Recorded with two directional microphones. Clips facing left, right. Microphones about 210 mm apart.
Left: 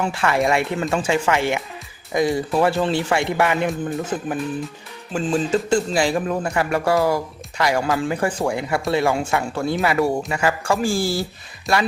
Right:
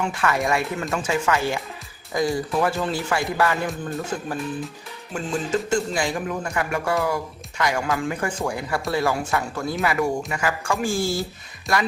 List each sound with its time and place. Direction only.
0.0 s speech: 30° left (ahead or behind)
5.1 s speech: 30° left (ahead or behind)